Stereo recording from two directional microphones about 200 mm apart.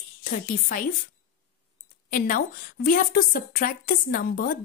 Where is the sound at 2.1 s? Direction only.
45° left (ahead or behind).